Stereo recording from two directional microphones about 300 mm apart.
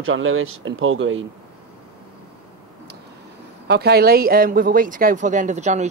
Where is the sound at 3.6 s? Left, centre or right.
Right.